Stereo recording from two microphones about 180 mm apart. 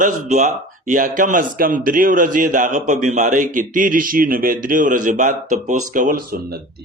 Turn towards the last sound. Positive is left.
turn(degrees=-60)  # may be behind; listen again after turning